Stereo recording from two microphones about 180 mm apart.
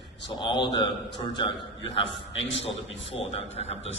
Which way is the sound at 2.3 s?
90° left.